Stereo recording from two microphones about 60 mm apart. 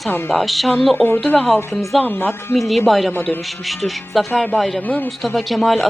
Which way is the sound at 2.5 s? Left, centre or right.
Centre.